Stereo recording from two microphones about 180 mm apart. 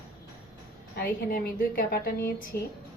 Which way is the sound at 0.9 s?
55° left (ahead or behind).